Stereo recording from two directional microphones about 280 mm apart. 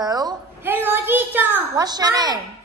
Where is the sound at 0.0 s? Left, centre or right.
Centre.